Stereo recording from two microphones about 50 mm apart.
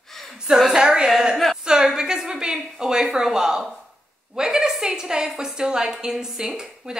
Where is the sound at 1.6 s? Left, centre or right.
Centre.